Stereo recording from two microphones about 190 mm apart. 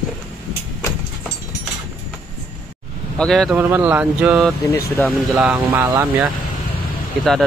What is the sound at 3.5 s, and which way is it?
Speech, 10° right (ahead or behind).